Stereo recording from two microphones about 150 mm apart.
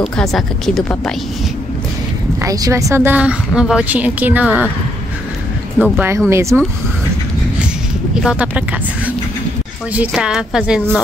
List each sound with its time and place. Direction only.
0.0 s a woman's voice: centre (ahead or behind)
2.4 s a woman's voice: 20° right (ahead or behind)
5.8 s a woman's voice: 10° right (ahead or behind)
8.1 s a woman's voice: 5° right (ahead or behind)